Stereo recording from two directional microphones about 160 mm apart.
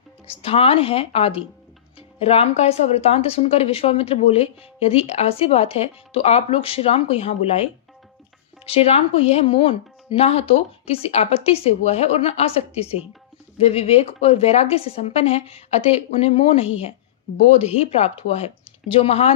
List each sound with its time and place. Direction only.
0.3 s speech: 35° left (ahead or behind)